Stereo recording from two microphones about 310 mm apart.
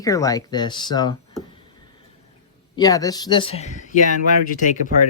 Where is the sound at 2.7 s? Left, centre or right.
Centre.